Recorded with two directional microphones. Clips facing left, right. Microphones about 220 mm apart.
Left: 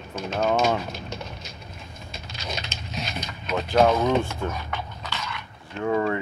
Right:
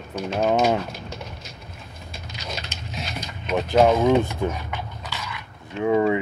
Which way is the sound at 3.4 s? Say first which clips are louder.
Right 2 dB; 20° right (ahead or behind).